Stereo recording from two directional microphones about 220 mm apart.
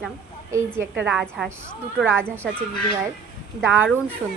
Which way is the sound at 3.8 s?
5° left (ahead or behind).